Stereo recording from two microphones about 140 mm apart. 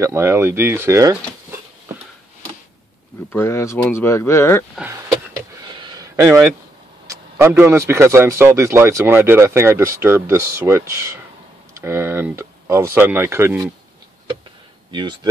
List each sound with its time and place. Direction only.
0.0 s speech: 20° right (ahead or behind)
3.3 s speech: 20° left (ahead or behind)
5.6 s a sound: 30° right (ahead or behind)
7.1 s speech: 20° right (ahead or behind)
14.9 s speech: 30° right (ahead or behind)